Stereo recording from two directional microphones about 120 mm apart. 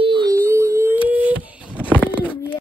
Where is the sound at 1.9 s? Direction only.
15° left (ahead or behind).